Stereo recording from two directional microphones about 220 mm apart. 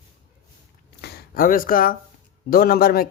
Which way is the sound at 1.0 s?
40° left (ahead or behind).